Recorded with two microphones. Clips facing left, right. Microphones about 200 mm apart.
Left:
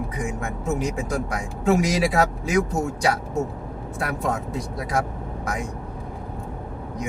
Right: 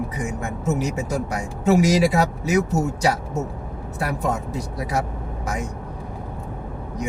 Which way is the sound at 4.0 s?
5° right (ahead or behind).